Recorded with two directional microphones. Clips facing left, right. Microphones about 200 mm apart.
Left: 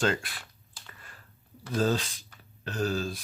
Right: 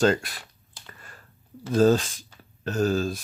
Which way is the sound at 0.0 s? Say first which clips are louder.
Right 7 dB; 40° right (ahead or behind).